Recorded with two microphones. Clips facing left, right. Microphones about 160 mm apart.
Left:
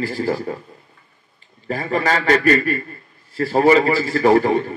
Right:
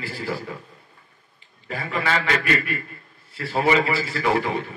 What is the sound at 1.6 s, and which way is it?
A man's voice, 40° left (ahead or behind).